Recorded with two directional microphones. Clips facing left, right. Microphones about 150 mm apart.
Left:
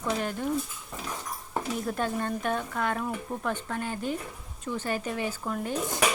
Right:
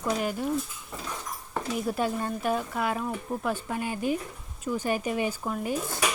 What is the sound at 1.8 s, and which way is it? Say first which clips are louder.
Speech: right 3 dB; 10° right (ahead or behind).